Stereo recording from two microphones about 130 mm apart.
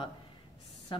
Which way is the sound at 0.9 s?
40° left (ahead or behind).